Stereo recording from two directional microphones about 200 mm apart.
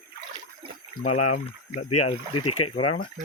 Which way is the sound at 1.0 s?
40° left (ahead or behind).